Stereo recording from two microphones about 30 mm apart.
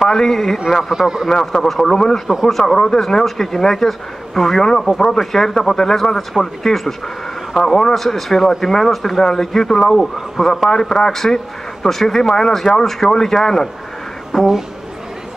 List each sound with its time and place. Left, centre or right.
0.0 s speech: centre
0.9 s a man's voice: centre
1.4 s speech: centre
4.9 s a man's voice: centre
5.2 s speech: centre
14.3 s a sound: centre